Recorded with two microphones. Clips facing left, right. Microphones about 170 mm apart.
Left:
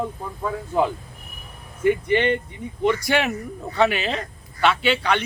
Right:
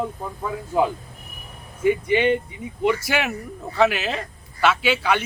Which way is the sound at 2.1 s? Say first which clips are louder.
Right 1 dB; 10° right (ahead or behind).